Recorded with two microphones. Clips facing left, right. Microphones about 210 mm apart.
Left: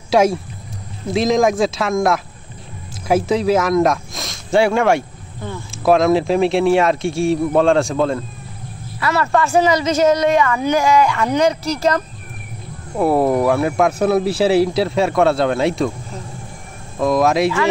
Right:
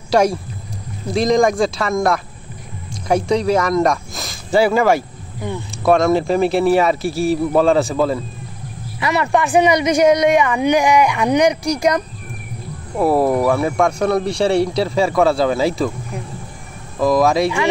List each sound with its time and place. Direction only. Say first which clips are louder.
0.1 s a man's voice: left 1 dB; centre (ahead or behind)
9.0 s speech: even; 15° right (ahead or behind)
12.9 s a man's voice: even; centre (ahead or behind)
17.0 s a man's voice: right 1 dB; centre (ahead or behind)